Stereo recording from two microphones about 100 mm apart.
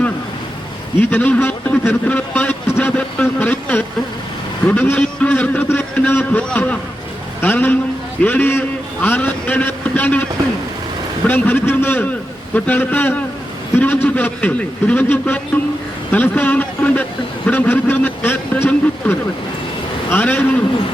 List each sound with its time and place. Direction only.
1.1 s a man's voice: 20° left (ahead or behind)
2.7 s vehicle: 20° left (ahead or behind)
4.6 s a man's voice: 15° left (ahead or behind)
11.3 s a man's voice: 20° left (ahead or behind)